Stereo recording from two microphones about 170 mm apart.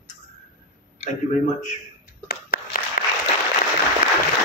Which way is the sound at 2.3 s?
60° left (ahead or behind).